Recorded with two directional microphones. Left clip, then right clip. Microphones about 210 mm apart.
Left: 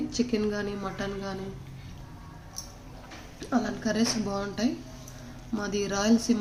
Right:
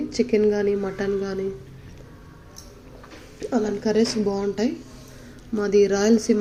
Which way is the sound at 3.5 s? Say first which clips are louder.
Right 7 dB; 5° right (ahead or behind).